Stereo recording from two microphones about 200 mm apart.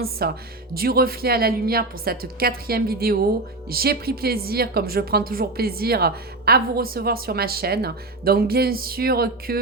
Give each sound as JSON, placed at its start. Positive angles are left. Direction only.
{"t": 0.2, "sound": "a woman's voice", "side_deg": -50}